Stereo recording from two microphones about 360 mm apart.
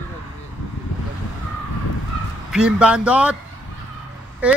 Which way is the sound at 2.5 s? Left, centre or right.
Centre.